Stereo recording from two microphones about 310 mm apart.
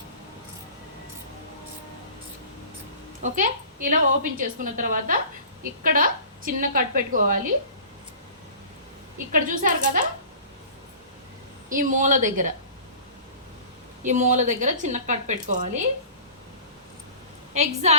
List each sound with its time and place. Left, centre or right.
3.2 s a woman's voice: right
9.1 s a woman's voice: right
11.7 s a woman's voice: right
14.0 s a woman's voice: right
17.5 s a woman's voice: right